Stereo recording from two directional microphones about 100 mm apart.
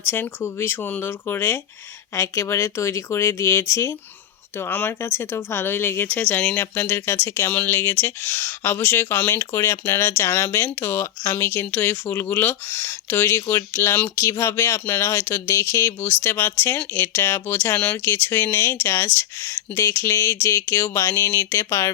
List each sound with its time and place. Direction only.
0.0 s speech: 20° left (ahead or behind)